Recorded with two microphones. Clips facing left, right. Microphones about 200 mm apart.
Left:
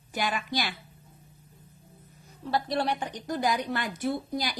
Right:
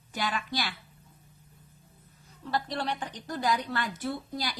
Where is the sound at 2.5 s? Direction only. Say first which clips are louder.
Left 4 dB; 10° left (ahead or behind).